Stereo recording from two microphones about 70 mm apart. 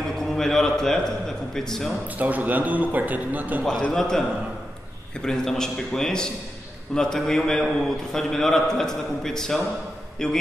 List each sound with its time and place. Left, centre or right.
0.2 s a man's voice: centre
2.1 s a man's voice: right
3.9 s a man's voice: centre
5.2 s a man's voice: centre